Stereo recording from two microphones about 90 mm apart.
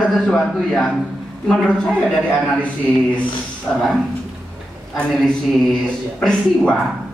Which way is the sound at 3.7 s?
15° left (ahead or behind).